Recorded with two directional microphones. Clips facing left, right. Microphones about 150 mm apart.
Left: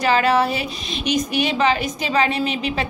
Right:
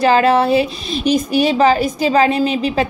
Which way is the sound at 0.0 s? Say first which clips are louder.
Right 5 dB; 30° right (ahead or behind).